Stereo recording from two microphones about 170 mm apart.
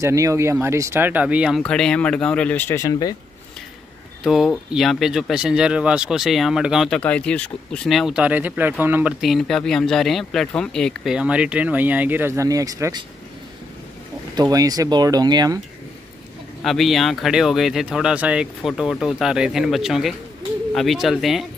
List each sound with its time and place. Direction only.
0.0 s speech: 20° right (ahead or behind)
1.6 s speech: 5° left (ahead or behind); by 3.2 s 20° left (ahead or behind)
4.2 s speech: centre (ahead or behind)
7.0 s speech: 5° left (ahead or behind); by 9.1 s 10° right (ahead or behind)
9.2 s speech: centre (ahead or behind); by 13.0 s 20° right (ahead or behind)
14.3 s speech: 20° right (ahead or behind)
16.6 s speech: centre (ahead or behind)